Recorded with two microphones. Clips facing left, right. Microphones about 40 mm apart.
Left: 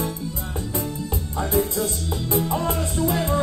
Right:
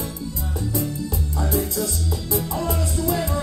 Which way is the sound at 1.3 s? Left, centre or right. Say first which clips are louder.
Left 3 dB; left.